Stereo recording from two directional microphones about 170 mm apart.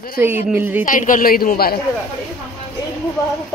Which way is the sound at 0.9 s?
50° left (ahead or behind).